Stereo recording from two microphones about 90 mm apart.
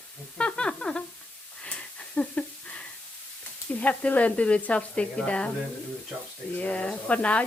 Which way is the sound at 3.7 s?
15° left (ahead or behind).